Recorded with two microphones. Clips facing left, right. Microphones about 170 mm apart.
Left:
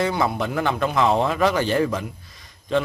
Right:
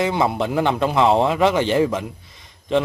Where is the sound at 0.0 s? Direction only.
25° right (ahead or behind).